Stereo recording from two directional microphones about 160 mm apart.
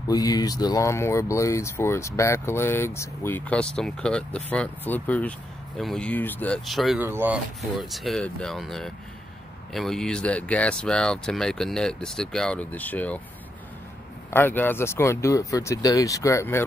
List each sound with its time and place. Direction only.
0.1 s speech: 25° left (ahead or behind); by 7.0 s centre (ahead or behind)
7.0 s speech: 15° right (ahead or behind)
7.8 s speech: centre (ahead or behind)
14.3 s speech: 10° left (ahead or behind)